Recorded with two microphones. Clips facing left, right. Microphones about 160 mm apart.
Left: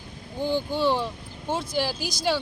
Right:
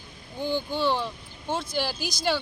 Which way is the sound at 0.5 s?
5° left (ahead or behind).